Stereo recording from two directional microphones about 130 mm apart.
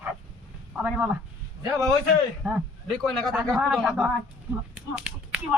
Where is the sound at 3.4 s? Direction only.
Centre (ahead or behind).